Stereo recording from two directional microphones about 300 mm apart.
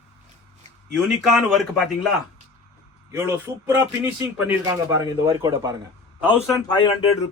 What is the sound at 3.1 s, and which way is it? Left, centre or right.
A man's voice, centre.